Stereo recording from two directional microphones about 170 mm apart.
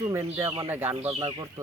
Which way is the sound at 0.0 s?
15° right (ahead or behind).